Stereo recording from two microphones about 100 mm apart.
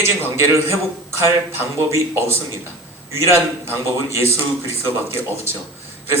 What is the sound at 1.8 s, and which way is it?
Speech, 25° right (ahead or behind).